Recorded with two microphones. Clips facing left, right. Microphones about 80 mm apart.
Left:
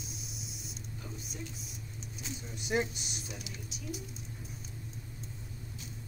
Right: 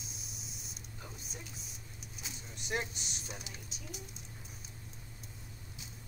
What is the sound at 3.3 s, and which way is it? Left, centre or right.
Speech, right.